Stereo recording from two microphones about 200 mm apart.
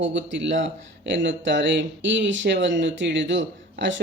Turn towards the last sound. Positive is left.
turn(degrees=-65)  # may be behind; listen again after turning